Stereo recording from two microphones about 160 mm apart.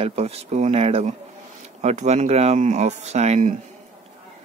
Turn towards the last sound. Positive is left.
turn(degrees=-50)  # may be behind; listen again after turning